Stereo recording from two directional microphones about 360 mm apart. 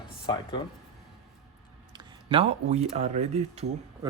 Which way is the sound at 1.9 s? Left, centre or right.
Centre.